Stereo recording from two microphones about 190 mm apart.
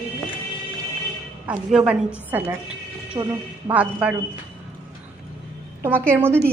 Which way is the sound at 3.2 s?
25° right (ahead or behind).